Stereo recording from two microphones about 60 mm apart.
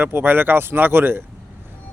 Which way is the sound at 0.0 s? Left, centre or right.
Right.